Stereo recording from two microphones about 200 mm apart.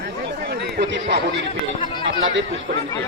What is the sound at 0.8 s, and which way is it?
Speech, 55° right (ahead or behind).